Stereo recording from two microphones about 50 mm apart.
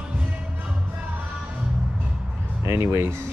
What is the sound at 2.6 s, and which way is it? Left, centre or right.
Speech, right.